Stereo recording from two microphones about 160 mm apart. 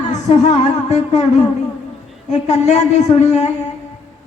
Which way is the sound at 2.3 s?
45° left (ahead or behind).